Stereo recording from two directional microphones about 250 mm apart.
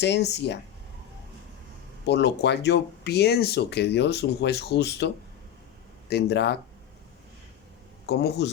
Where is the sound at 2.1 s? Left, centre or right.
Left.